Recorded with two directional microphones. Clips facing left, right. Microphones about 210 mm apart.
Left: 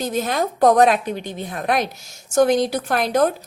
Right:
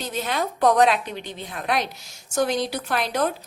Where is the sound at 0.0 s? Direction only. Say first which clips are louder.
Left 5 dB; 45° left (ahead or behind).